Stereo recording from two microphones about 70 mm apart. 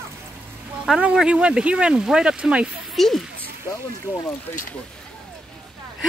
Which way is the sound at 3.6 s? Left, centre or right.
Left.